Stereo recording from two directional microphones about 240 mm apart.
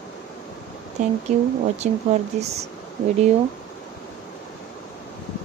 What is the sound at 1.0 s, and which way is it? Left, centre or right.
Speech, right.